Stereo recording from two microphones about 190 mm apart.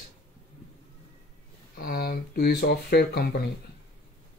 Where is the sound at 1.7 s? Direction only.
50° left (ahead or behind).